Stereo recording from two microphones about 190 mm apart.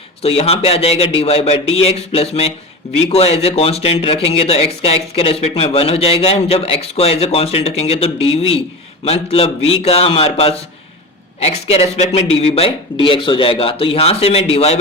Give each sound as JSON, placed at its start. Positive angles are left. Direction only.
{"t": 0.2, "sound": "a man's voice", "side_deg": 30}